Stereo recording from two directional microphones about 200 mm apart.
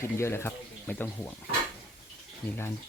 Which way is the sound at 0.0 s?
15° left (ahead or behind).